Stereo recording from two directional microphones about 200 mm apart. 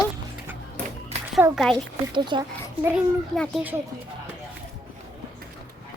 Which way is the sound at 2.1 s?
25° right (ahead or behind).